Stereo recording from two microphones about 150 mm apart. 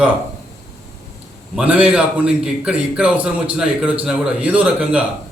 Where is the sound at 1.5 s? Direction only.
10° right (ahead or behind).